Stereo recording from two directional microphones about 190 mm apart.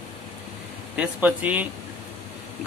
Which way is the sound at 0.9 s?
5° right (ahead or behind).